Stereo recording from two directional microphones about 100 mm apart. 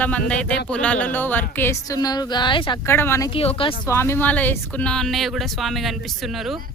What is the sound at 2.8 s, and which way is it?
Speech, 25° left (ahead or behind).